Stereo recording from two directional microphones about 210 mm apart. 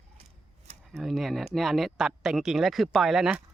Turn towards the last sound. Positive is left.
turn(degrees=0)  # may be behind; listen again after turning